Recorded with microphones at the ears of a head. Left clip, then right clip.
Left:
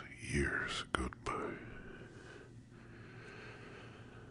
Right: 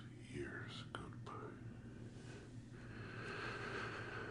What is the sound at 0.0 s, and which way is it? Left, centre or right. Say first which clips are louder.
Whispering: left 12 dB; left.